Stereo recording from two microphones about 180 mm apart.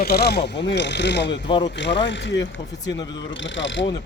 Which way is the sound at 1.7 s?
75° left (ahead or behind).